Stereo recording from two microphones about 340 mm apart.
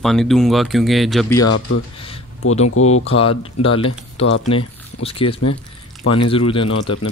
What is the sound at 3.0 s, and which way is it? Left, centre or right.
Speech, centre.